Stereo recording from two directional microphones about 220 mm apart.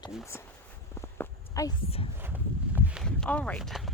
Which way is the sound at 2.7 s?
5° right (ahead or behind).